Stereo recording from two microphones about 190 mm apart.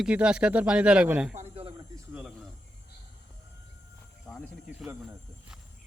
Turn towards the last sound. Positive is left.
turn(degrees=5)  # may be behind; listen again after turning